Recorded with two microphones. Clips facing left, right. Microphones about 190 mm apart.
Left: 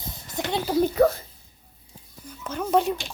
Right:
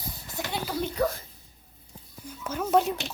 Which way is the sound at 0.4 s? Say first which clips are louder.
Left 6 dB; 20° left (ahead or behind).